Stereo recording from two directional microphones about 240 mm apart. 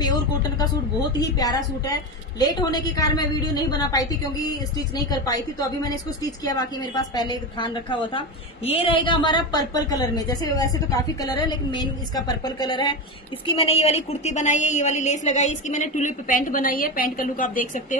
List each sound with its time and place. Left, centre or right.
1.4 s a woman's voice: centre; by 17.8 s left